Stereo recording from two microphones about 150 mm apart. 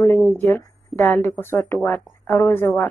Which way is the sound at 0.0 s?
15° left (ahead or behind).